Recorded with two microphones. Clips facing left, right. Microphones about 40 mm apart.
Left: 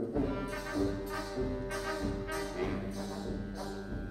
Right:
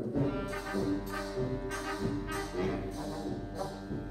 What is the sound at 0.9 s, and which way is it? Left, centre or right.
Music, centre.